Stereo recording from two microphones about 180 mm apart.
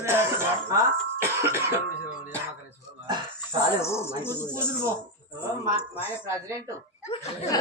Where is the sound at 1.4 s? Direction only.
15° right (ahead or behind).